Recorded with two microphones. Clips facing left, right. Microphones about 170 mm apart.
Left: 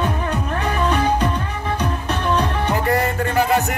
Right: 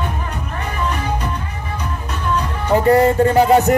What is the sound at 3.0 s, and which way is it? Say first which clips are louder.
Speech: right 7 dB; 35° right (ahead or behind).